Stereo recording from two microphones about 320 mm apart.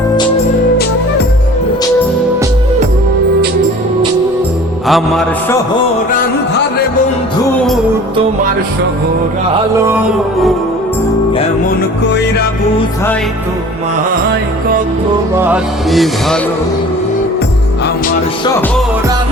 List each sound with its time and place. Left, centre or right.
4.9 s speech: centre
15.4 s speech: centre